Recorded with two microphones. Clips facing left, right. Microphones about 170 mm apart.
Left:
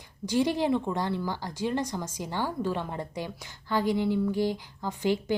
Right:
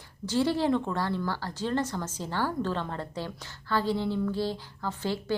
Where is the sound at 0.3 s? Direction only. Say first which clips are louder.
Even; 15° left (ahead or behind).